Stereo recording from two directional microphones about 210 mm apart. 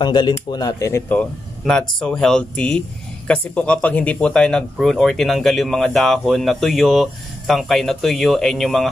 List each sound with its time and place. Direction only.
0.0 s speech: 20° left (ahead or behind); by 8.8 s centre (ahead or behind)